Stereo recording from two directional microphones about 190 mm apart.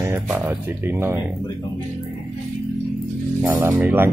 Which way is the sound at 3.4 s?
10° right (ahead or behind).